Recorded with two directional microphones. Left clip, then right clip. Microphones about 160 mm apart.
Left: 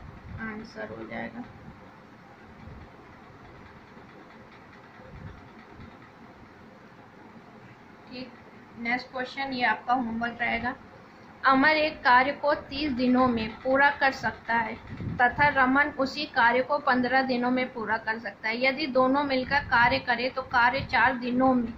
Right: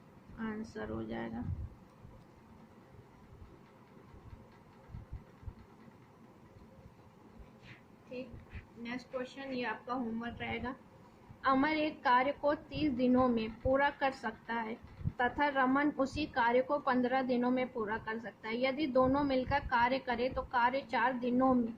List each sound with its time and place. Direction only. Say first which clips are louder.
0.8 s speech: left 5 dB; 50° right (ahead or behind)
8.8 s a woman's voice: left 11 dB; 25° right (ahead or behind)